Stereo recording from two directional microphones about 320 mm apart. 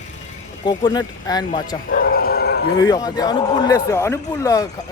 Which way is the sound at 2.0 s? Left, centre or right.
Left.